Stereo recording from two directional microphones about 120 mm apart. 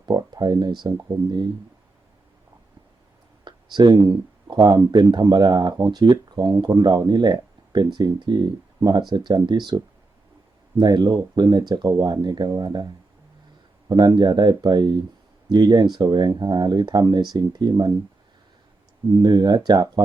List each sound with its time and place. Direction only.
0.0 s speech: 35° right (ahead or behind)
3.4 s speech: 40° right (ahead or behind)
19.2 s speech: 35° right (ahead or behind)